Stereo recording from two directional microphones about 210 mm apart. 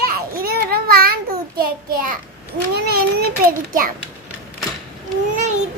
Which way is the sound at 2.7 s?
50° right (ahead or behind).